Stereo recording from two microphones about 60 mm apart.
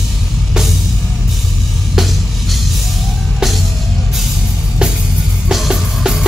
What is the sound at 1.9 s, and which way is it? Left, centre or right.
Music, centre.